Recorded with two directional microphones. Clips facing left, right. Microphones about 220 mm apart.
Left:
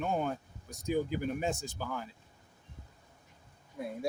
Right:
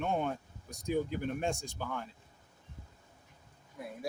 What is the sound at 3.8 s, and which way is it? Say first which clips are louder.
Speech: left 5 dB; 25° left (ahead or behind).